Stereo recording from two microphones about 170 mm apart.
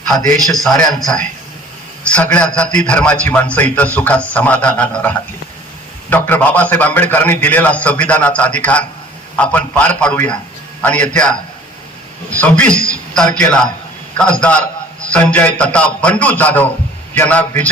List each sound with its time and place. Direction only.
0.4 s a man's voice: centre (ahead or behind)
12.4 s a man's voice: 5° left (ahead or behind)